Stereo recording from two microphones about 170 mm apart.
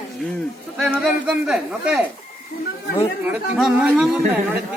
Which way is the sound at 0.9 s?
5° right (ahead or behind).